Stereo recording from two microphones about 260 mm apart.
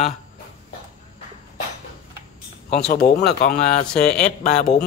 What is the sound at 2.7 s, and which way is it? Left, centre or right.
Speech, left.